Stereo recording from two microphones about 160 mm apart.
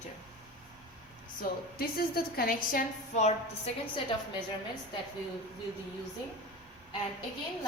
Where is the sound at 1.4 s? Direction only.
70° left (ahead or behind).